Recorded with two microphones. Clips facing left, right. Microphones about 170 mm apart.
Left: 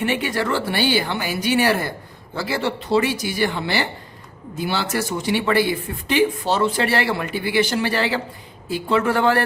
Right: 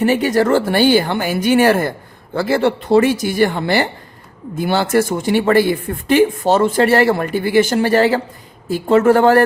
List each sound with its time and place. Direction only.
0.0 s speech: 40° right (ahead or behind)